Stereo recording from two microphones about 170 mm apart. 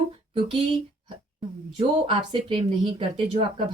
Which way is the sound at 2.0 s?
30° right (ahead or behind).